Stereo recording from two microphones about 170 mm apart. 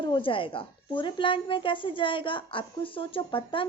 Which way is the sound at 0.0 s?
30° left (ahead or behind).